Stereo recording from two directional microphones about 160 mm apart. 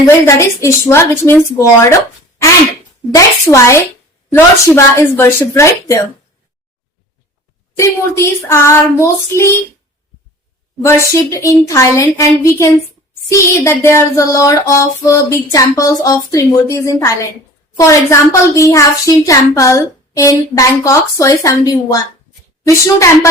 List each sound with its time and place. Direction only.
0.3 s child singing: 20° left (ahead or behind)
3.1 s a child's voice: 20° left (ahead or behind)
4.3 s child singing: 15° left (ahead or behind)
7.8 s child singing: 20° left (ahead or behind)
10.8 s a child's voice: 20° left (ahead or behind)
13.3 s child singing: 15° left (ahead or behind)
15.5 s a child's voice: 20° left (ahead or behind)